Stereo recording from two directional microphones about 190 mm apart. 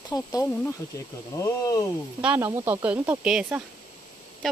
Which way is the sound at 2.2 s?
10° right (ahead or behind).